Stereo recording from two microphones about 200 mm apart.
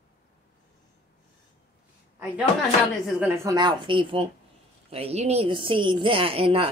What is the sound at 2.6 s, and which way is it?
Speech, centre (ahead or behind).